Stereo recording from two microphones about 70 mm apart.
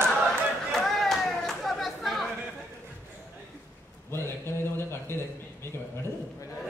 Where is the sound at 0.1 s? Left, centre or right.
Centre.